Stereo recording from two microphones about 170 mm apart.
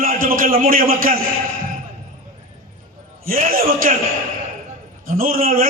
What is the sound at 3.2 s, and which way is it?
Speech, 55° right (ahead or behind).